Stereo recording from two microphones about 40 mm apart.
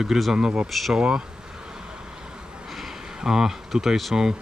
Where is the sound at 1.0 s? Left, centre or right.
Right.